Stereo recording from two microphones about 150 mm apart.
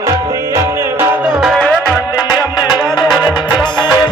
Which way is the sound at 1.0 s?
5° right (ahead or behind).